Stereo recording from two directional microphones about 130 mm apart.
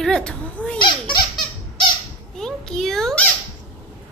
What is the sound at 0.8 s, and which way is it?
Speech, 35° left (ahead or behind).